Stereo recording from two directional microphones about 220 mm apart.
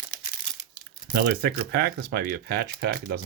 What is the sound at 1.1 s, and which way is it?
Speech, 45° right (ahead or behind).